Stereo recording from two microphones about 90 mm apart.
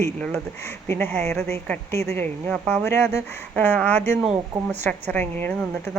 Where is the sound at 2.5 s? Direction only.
10° left (ahead or behind).